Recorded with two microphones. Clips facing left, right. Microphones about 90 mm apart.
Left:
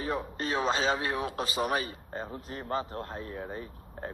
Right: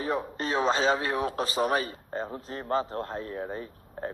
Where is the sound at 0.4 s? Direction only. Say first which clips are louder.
Right 3 dB; 35° right (ahead or behind).